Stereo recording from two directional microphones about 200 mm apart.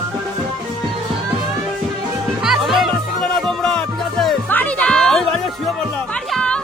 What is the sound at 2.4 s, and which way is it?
Music, centre (ahead or behind).